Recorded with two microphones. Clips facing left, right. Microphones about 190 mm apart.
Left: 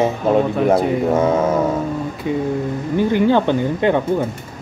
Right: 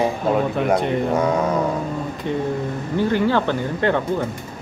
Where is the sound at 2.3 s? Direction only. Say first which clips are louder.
Left 3 dB; 10° left (ahead or behind).